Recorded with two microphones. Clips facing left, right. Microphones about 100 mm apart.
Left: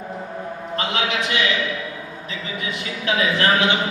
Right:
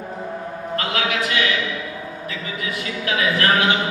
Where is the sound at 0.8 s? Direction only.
25° left (ahead or behind).